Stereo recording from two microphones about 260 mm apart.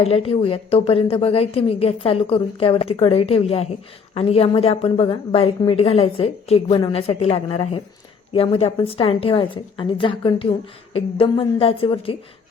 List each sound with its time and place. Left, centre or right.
0.0 s a woman's voice: left